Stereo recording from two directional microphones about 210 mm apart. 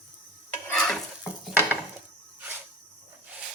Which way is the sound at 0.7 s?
5° left (ahead or behind).